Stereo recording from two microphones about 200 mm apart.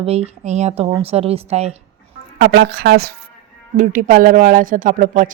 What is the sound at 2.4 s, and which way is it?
Speech, 60° right (ahead or behind).